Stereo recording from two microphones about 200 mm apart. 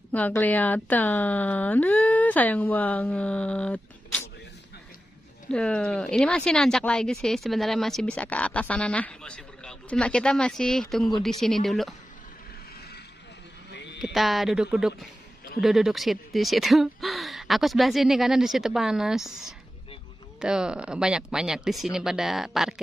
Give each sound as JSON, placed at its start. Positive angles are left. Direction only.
{"t": 0.1, "sound": "speech", "side_deg": 10}
{"t": 5.5, "sound": "speech", "side_deg": 5}
{"t": 13.7, "sound": "a sound", "side_deg": 60}
{"t": 13.9, "sound": "speech", "side_deg": 0}